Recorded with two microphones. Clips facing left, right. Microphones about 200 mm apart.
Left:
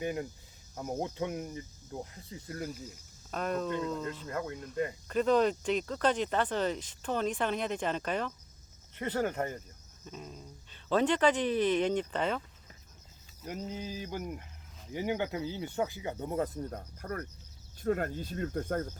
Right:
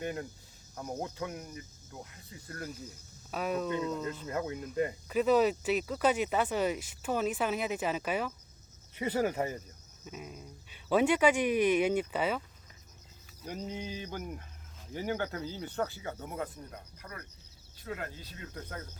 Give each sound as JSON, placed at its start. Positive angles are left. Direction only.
{"t": 0.0, "sound": "speech", "side_deg": 10}
{"t": 3.3, "sound": "a sound", "side_deg": -5}
{"t": 4.5, "sound": "speech", "side_deg": -5}
{"t": 13.4, "sound": "a sound", "side_deg": 5}
{"t": 14.9, "sound": "speech", "side_deg": 15}
{"t": 16.7, "sound": "speech", "side_deg": 50}